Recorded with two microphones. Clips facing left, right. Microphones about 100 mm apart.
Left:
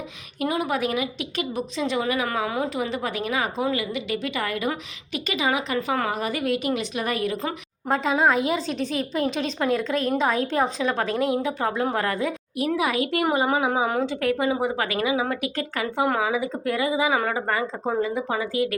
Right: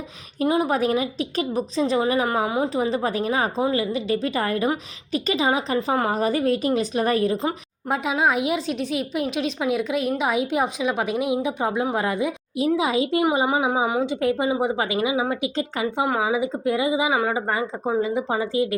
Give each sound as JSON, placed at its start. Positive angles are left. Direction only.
{"t": 0.3, "sound": "a woman's voice", "side_deg": -30}
{"t": 7.9, "sound": "a woman's voice", "side_deg": -5}